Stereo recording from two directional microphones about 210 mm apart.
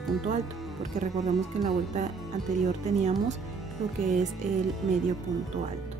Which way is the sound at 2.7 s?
35° right (ahead or behind).